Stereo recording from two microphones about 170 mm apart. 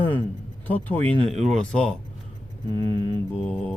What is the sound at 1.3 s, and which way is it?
Mantra, 40° right (ahead or behind).